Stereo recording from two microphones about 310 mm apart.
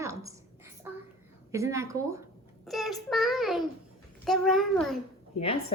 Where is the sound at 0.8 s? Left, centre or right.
Centre.